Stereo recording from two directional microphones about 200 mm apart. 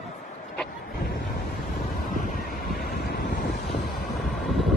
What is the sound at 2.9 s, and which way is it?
Vehicle, 50° left (ahead or behind).